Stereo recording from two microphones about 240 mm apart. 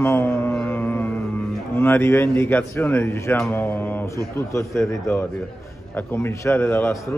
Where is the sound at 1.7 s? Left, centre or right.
Centre.